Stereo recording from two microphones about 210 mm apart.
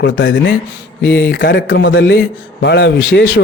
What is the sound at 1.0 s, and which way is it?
Speech, 55° left (ahead or behind).